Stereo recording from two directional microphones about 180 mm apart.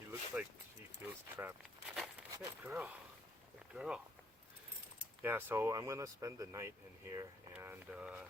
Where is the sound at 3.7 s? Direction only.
5° right (ahead or behind).